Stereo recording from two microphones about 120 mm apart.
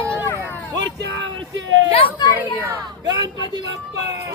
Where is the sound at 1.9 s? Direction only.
45° left (ahead or behind).